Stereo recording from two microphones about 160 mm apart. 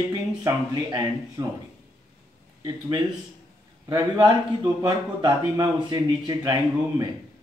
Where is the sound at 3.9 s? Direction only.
25° right (ahead or behind).